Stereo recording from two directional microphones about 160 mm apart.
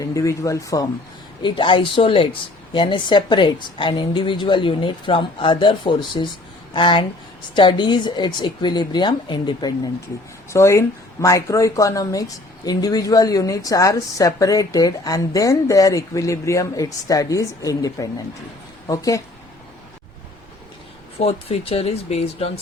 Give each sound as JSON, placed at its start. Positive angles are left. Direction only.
{"t": 0.0, "sound": "speech", "side_deg": 20}
{"t": 21.2, "sound": "speech", "side_deg": 40}